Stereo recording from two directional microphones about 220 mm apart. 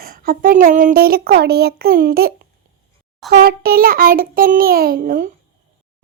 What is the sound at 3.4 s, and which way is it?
A child's voice, 40° right (ahead or behind).